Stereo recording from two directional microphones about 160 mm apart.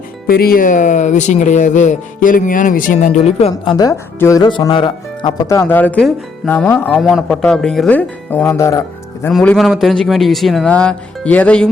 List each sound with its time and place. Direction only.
0.3 s speech: 70° left (ahead or behind); by 3.5 s 45° left (ahead or behind)
3.5 s speech: 25° left (ahead or behind)
5.5 s speech: 15° left (ahead or behind)
7.0 s speech: centre (ahead or behind); by 8.8 s 20° left (ahead or behind)
9.3 s speech: 5° left (ahead or behind)